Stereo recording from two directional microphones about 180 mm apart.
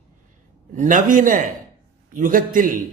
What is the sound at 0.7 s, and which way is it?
A man's voice, 45° right (ahead or behind).